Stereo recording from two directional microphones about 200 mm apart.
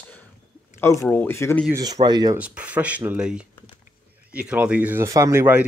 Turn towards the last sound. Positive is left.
turn(degrees=-10)  # may be behind; listen again after turning